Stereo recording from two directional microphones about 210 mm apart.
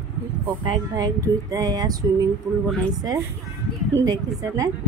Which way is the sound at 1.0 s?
15° right (ahead or behind).